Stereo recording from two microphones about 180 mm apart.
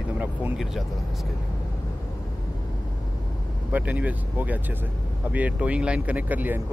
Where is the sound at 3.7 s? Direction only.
10° right (ahead or behind).